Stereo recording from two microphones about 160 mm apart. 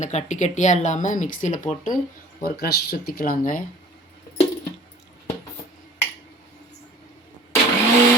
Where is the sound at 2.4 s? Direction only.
80° left; by 3.6 s 60° left (ahead or behind).